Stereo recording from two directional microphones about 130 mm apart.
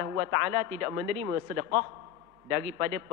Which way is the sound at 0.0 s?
25° right (ahead or behind).